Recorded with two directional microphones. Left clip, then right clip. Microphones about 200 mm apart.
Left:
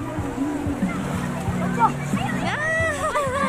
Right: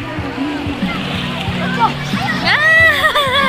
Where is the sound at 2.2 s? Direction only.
15° right (ahead or behind).